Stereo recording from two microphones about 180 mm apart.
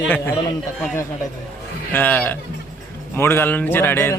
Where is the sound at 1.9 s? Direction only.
10° left (ahead or behind).